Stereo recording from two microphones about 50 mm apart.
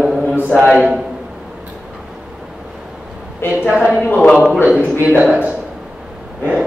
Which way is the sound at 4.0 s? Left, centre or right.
Left.